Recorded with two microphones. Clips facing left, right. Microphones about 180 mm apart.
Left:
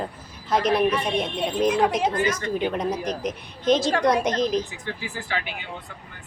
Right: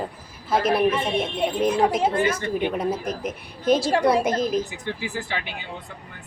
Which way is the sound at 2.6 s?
5° right (ahead or behind).